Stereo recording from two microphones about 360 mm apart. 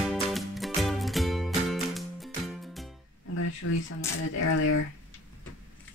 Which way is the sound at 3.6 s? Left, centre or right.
Left.